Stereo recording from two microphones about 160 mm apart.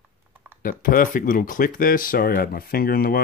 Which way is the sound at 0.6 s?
60° left (ahead or behind).